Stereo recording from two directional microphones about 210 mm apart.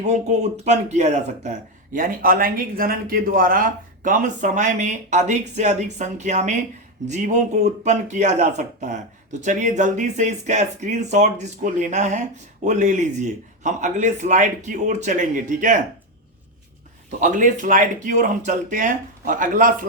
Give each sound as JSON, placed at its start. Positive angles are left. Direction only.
{"t": 0.0, "sound": "speech", "side_deg": -35}
{"t": 17.2, "sound": "speech", "side_deg": -35}